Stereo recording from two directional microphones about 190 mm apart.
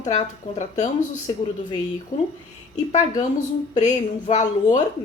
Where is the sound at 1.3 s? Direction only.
25° left (ahead or behind).